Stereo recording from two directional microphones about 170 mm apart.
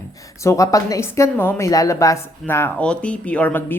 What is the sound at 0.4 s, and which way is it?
Speech, 20° left (ahead or behind).